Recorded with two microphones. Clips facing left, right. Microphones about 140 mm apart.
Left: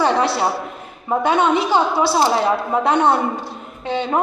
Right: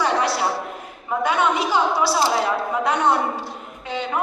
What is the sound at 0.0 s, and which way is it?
A man's voice, 30° left (ahead or behind).